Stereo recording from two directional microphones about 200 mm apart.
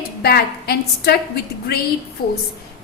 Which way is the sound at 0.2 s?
50° left (ahead or behind).